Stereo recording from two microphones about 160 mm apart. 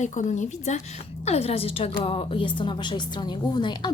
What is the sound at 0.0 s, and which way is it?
A woman's voice, 50° left (ahead or behind).